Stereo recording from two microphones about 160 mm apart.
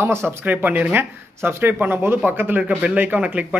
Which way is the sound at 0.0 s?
15° right (ahead or behind).